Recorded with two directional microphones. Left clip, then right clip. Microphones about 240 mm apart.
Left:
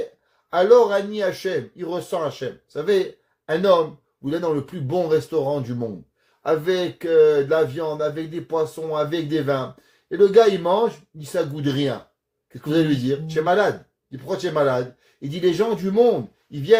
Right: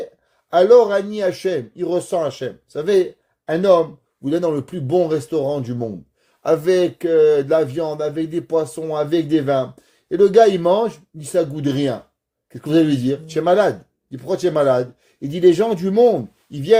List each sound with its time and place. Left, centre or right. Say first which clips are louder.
0.5 s speech: right 3 dB; right